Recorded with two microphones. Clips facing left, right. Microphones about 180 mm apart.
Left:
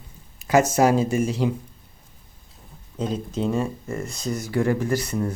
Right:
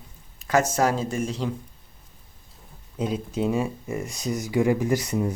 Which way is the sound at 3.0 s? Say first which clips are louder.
Even; 10° right (ahead or behind).